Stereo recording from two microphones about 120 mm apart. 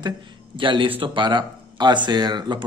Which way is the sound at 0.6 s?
45° right (ahead or behind).